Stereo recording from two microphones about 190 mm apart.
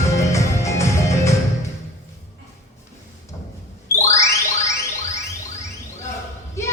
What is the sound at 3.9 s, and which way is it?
Music, 15° left (ahead or behind).